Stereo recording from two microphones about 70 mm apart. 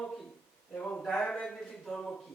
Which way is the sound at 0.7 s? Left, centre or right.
Left.